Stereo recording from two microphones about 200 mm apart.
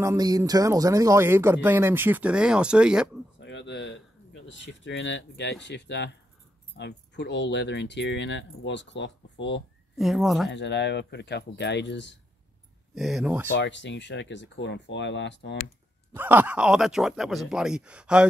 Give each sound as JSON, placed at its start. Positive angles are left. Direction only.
{"t": 0.0, "sound": "speech", "side_deg": -15}
{"t": 3.3, "sound": "a sound", "side_deg": 60}
{"t": 4.5, "sound": "speech", "side_deg": 65}
{"t": 9.9, "sound": "speech", "side_deg": 0}
{"t": 10.5, "sound": "speech", "side_deg": 60}
{"t": 12.9, "sound": "speech", "side_deg": 0}
{"t": 13.6, "sound": "speech", "side_deg": 60}
{"t": 16.1, "sound": "speech", "side_deg": -10}